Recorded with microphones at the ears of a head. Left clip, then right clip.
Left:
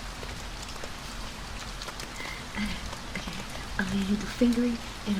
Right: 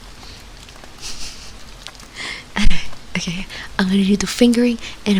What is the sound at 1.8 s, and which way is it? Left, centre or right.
Speech, right.